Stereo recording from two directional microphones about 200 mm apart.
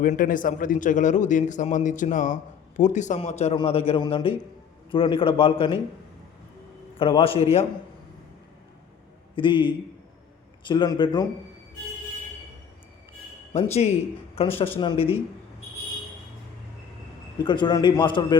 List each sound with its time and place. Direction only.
0.0 s a man's voice: 45° left (ahead or behind)
7.0 s a man's voice: 25° left (ahead or behind)
9.3 s a man's voice: 25° left (ahead or behind)
13.5 s a man's voice: 30° left (ahead or behind)
17.4 s a man's voice: 25° left (ahead or behind)